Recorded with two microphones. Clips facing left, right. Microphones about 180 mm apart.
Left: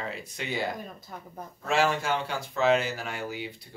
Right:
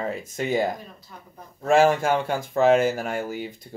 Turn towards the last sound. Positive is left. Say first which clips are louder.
# right 5 dB
turn(degrees=-45)  # may be behind; listen again after turning